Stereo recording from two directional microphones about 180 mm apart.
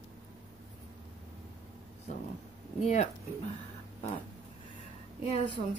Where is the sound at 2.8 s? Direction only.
40° left (ahead or behind).